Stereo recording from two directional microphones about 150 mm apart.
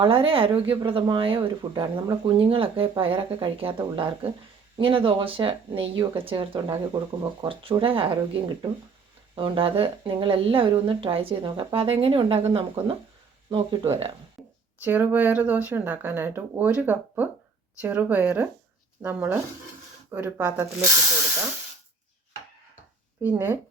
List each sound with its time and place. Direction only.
0.0 s speech: 35° right (ahead or behind)
14.8 s speech: 10° right (ahead or behind)
23.2 s speech: 15° right (ahead or behind)